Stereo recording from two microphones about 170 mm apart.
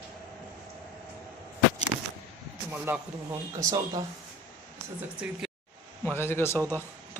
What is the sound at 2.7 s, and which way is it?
Speech, 10° right (ahead or behind).